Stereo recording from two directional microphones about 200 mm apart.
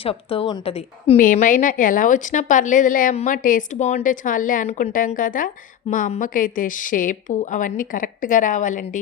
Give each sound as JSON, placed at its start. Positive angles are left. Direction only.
{"t": 0.0, "sound": "a woman's voice", "side_deg": 30}
{"t": 1.2, "sound": "a woman's voice", "side_deg": 40}